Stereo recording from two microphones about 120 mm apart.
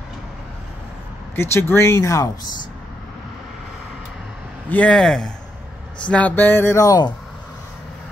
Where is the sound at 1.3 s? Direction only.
20° left (ahead or behind).